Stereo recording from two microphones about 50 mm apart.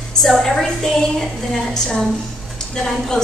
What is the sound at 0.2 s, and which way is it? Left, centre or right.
A woman's voice, centre.